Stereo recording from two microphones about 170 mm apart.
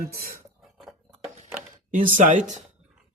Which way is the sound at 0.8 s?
Centre (ahead or behind).